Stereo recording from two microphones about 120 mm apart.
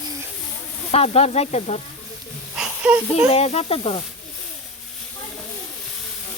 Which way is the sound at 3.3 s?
60° left (ahead or behind).